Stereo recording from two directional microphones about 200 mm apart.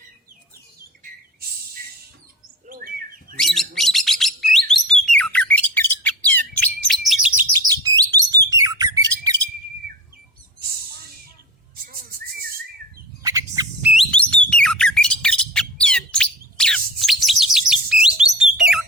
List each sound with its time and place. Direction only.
2.6 s bird: 45° right (ahead or behind)
3.3 s bird: centre (ahead or behind)
7.7 s bird: 20° right (ahead or behind)
11.9 s bird: 50° right (ahead or behind)
13.2 s bird: 15° right (ahead or behind)
13.9 s bird: 5° left (ahead or behind)